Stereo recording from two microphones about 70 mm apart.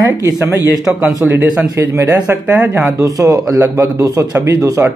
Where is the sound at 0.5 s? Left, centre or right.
Right.